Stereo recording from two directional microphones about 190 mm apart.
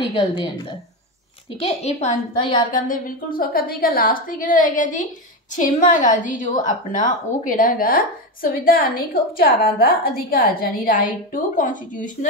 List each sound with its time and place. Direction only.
0.1 s a woman's voice: 25° left (ahead or behind)
1.6 s a woman's voice: 35° left (ahead or behind)